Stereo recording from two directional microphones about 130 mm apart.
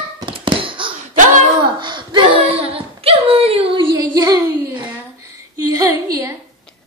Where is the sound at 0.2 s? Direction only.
40° right (ahead or behind).